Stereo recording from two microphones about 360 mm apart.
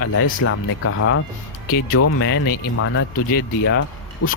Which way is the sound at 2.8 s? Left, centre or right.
Left.